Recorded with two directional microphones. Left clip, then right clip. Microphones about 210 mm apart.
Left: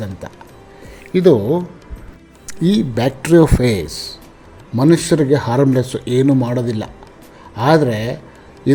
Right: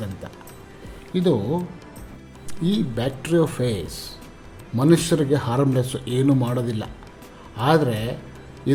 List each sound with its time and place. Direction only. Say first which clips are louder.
1.1 s a man's voice: left 10 dB; 30° left (ahead or behind)